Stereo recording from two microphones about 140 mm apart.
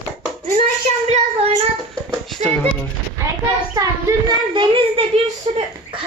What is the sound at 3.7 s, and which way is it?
Speech, 25° right (ahead or behind).